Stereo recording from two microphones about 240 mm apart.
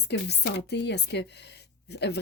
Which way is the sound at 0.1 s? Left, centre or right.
Left.